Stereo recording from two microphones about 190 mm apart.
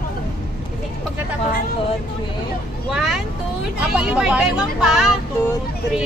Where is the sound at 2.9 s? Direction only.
Centre (ahead or behind).